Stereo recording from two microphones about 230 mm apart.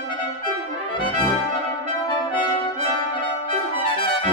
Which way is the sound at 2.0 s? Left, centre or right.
Left.